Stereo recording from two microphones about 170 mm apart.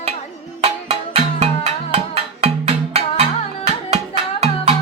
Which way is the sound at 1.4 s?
35° right (ahead or behind).